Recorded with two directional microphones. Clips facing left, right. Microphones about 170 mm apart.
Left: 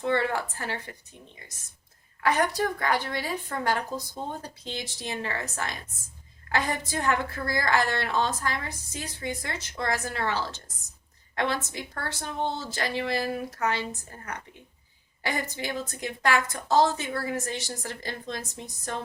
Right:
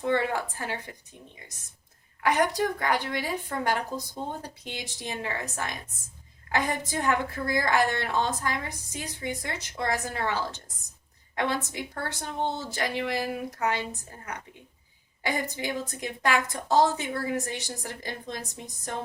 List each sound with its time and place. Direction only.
0.0 s a woman's voice: 15° right (ahead or behind)
2.2 s a woman's voice: 15° right (ahead or behind)
15.2 s a woman's voice: 15° right (ahead or behind)